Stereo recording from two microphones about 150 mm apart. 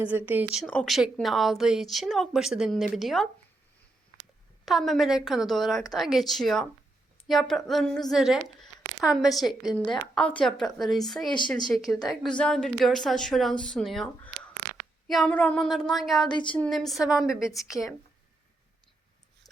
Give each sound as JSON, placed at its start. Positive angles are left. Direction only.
{"t": 0.0, "sound": "speech", "side_deg": -10}
{"t": 0.6, "sound": "speech", "side_deg": 5}
{"t": 4.6, "sound": "speech", "side_deg": 0}
{"t": 16.3, "sound": "speech", "side_deg": 30}
{"t": 16.6, "sound": "speech", "side_deg": 0}